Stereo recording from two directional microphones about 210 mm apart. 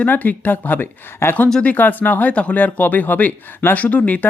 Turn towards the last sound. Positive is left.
turn(degrees=5)  # may be behind; listen again after turning